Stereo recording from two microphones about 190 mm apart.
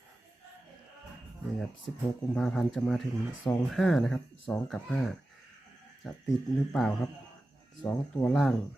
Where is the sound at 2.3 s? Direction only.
5° left (ahead or behind).